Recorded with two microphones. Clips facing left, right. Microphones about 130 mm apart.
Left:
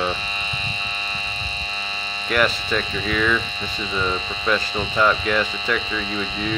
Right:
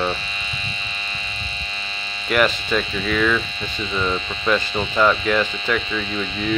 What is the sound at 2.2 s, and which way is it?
Speech, centre (ahead or behind).